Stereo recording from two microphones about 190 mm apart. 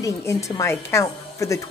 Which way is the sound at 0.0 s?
15° left (ahead or behind).